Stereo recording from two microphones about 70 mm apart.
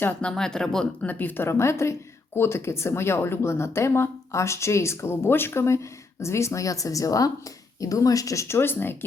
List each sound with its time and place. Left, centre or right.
0.2 s speech: centre
1.0 s speech: left
1.5 s a woman's voice: left
8.5 s a woman's voice: left